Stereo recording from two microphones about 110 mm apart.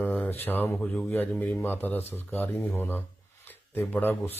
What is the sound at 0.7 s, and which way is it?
Speech, 10° left (ahead or behind).